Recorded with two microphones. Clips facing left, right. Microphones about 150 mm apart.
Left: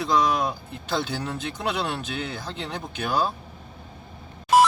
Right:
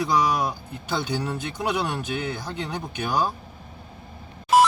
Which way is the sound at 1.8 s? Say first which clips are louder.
Right 2 dB; 15° right (ahead or behind).